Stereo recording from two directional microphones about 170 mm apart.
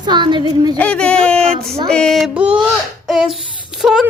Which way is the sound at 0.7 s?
5° left (ahead or behind).